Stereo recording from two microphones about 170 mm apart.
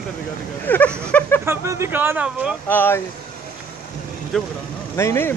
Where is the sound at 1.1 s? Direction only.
10° left (ahead or behind).